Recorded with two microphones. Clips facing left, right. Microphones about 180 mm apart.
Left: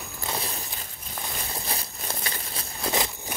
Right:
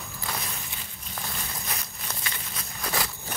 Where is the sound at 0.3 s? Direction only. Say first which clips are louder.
Left 3 dB; 30° left (ahead or behind).